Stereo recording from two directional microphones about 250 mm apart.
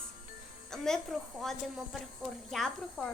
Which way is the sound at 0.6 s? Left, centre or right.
Centre.